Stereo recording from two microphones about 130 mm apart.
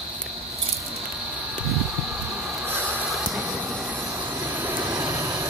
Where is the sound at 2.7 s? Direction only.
15° right (ahead or behind).